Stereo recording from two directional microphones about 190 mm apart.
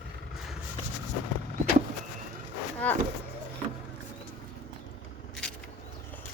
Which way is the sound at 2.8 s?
10° left (ahead or behind).